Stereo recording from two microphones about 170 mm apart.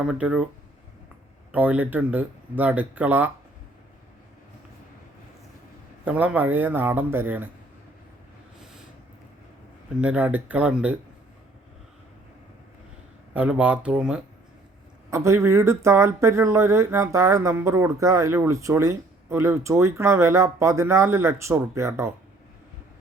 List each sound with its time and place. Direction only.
0.0 s speech: 5° right (ahead or behind)
1.5 s speech: 10° right (ahead or behind)
6.1 s speech: 10° right (ahead or behind)
10.0 s speech: 10° right (ahead or behind)
13.3 s speech: 5° right (ahead or behind)